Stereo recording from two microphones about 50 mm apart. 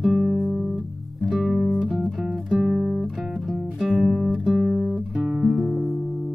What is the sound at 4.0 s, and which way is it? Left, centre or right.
Guitar, centre.